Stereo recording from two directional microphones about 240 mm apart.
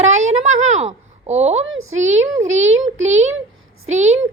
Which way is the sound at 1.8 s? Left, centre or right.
Right.